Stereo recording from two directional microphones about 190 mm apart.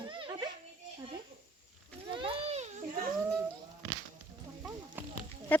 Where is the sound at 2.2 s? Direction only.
30° right (ahead or behind).